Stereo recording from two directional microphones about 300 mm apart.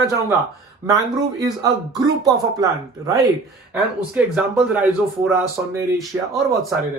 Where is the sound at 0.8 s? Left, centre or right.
Centre.